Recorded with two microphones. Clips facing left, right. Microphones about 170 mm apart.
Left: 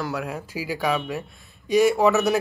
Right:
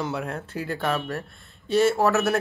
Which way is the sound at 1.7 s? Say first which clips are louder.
Left 2 dB; 15° left (ahead or behind).